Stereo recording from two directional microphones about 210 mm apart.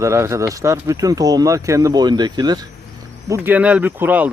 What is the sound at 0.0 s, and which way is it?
Speech, 15° right (ahead or behind).